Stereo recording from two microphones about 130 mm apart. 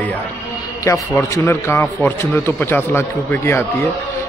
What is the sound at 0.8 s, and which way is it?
A man's voice, 20° left (ahead or behind).